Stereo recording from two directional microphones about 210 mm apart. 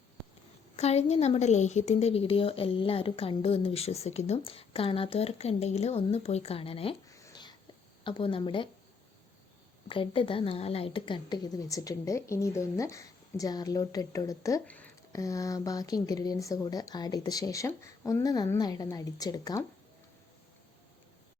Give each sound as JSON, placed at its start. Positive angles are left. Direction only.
{"t": 0.8, "sound": "a woman's voice", "side_deg": 30}
{"t": 7.1, "sound": "a sound", "side_deg": 20}
{"t": 8.0, "sound": "a woman's voice", "side_deg": 25}
{"t": 9.9, "sound": "a woman's voice", "side_deg": 25}